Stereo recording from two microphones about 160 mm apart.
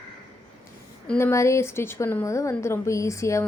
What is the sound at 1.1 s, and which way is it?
A woman's voice, 15° left (ahead or behind).